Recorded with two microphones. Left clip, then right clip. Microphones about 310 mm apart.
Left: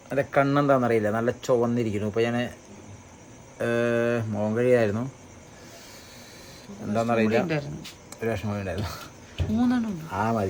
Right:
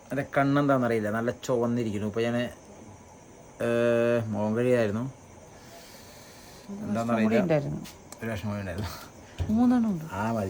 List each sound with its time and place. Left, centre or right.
0.1 s speech: centre
3.6 s speech: centre
6.9 s a man's voice: centre
7.4 s speech: right
8.2 s speech: centre
9.6 s speech: centre
10.1 s a man's voice: centre